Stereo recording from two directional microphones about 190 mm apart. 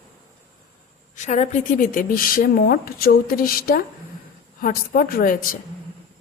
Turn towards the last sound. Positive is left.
turn(degrees=45)  # may be behind; listen again after turning